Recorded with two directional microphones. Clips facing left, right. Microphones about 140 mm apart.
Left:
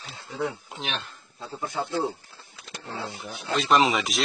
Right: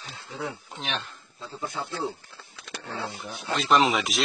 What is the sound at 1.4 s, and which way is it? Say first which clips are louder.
Speech: left 1 dB; 50° left (ahead or behind).